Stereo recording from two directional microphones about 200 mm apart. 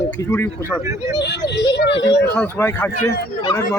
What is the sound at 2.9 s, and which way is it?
Speech, 50° left (ahead or behind).